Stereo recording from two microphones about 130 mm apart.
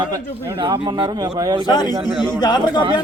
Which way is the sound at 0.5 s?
40° right (ahead or behind).